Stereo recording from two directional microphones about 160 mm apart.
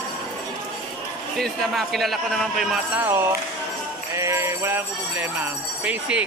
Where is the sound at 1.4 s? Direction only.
Centre (ahead or behind).